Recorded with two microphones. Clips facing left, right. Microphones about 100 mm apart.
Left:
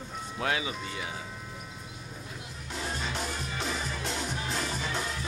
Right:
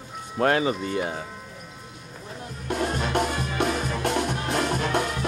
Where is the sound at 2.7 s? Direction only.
60° right (ahead or behind).